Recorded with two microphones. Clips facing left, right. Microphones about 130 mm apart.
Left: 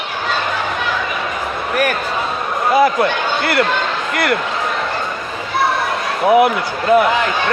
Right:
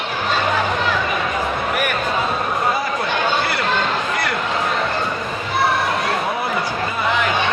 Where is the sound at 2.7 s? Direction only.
75° left (ahead or behind).